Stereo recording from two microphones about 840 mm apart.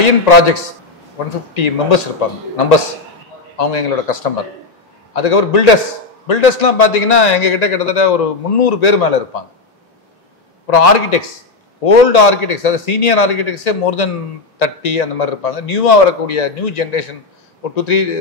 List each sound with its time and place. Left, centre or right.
0.0 s a man's voice: left
3.5 s a man's voice: left
10.7 s a man's voice: left